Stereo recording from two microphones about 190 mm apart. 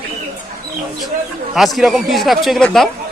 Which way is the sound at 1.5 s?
Centre (ahead or behind).